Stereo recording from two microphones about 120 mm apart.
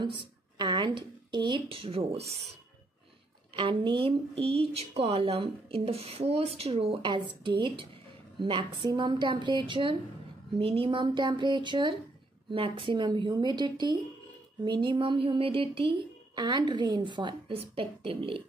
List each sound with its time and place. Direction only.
0.6 s speech: 40° right (ahead or behind); by 2.4 s 60° right (ahead or behind)
3.5 s a woman's voice: 45° right (ahead or behind)
16.3 s a woman's voice: 35° right (ahead or behind)